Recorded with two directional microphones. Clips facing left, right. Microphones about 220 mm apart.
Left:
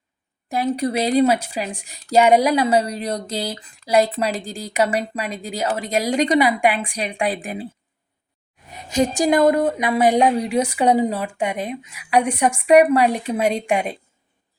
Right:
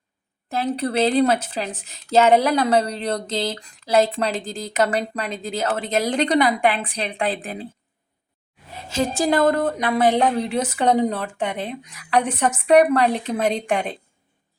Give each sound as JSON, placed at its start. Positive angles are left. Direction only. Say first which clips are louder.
{"t": 0.5, "sound": "a woman's voice", "louder": "left 1 dB", "side_deg": 10}
{"t": 8.7, "sound": "a woman's voice", "louder": "left 3 dB", "side_deg": 15}